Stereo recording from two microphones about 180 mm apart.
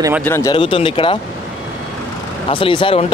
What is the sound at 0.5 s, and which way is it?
Speech, 30° left (ahead or behind).